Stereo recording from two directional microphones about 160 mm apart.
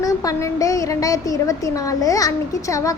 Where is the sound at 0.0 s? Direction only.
20° left (ahead or behind).